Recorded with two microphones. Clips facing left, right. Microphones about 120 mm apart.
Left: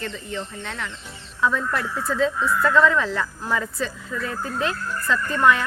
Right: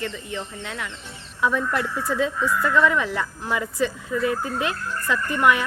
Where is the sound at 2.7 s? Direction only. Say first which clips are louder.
Left 2 dB; 15° right (ahead or behind).